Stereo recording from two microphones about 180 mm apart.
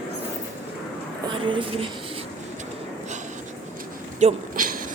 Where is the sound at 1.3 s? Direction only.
30° right (ahead or behind).